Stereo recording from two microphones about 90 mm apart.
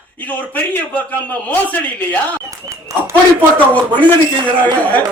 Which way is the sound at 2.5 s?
35° right (ahead or behind).